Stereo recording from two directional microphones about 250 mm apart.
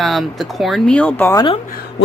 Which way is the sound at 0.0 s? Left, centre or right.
Centre.